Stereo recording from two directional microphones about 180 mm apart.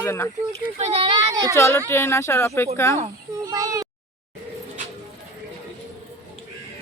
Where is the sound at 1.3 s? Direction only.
20° right (ahead or behind).